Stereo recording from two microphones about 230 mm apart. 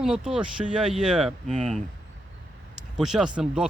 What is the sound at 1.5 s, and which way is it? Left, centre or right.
Speech, right.